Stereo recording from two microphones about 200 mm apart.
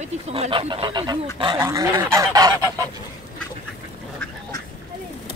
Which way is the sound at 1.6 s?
20° right (ahead or behind).